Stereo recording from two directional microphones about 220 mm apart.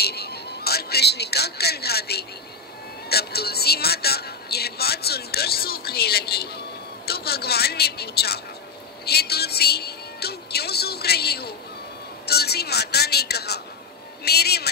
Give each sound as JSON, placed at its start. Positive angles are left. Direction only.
{"t": 0.0, "sound": "speech", "side_deg": 45}